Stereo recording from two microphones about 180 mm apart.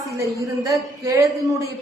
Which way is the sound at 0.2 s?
15° right (ahead or behind).